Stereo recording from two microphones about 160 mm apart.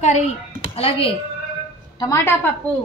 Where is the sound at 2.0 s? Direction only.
20° left (ahead or behind).